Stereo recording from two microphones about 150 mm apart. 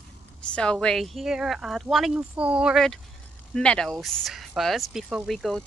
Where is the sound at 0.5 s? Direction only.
5° left (ahead or behind).